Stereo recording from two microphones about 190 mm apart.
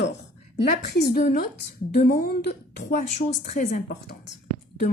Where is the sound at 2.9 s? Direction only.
40° left (ahead or behind).